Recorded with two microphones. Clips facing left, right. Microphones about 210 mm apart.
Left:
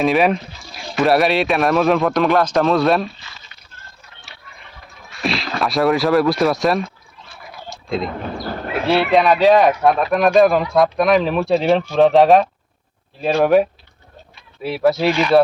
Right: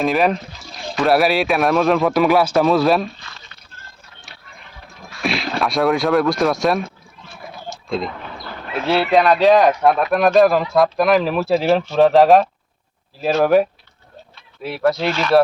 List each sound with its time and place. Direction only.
0.0 s a man's voice: centre (ahead or behind)
5.2 s a man's voice: centre (ahead or behind)
7.9 s speech: centre (ahead or behind)
8.2 s bird: 45° left (ahead or behind)
8.9 s a man's voice: centre (ahead or behind)